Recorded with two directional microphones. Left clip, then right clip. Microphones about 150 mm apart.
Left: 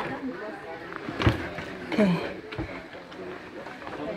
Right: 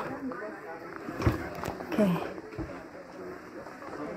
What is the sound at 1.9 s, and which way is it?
Speech, 25° left (ahead or behind).